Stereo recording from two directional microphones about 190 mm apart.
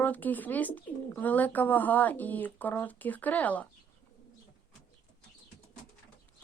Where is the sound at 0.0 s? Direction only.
10° left (ahead or behind).